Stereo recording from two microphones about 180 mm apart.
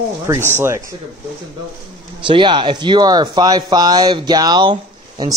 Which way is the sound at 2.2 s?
25° right (ahead or behind).